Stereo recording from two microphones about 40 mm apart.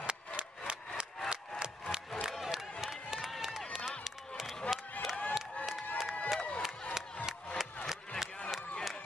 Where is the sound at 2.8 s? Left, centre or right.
Centre.